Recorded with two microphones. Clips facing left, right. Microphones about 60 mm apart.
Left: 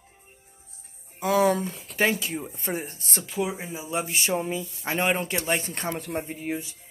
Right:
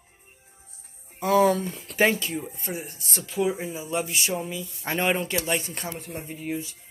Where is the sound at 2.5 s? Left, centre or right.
Left.